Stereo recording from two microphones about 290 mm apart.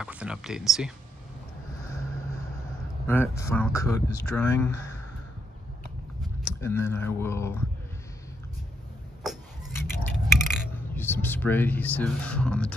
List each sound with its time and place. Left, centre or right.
0.0 s speech: centre
3.1 s speech: centre
6.2 s speech: centre
9.2 s a sound: centre